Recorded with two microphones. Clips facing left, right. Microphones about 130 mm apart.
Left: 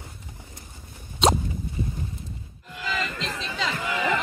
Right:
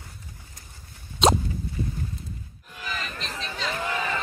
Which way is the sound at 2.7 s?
90° left.